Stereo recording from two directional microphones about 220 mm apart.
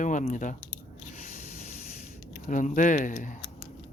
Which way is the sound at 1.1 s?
35° left (ahead or behind).